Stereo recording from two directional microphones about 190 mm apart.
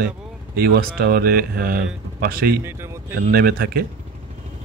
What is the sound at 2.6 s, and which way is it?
Speech, 15° right (ahead or behind).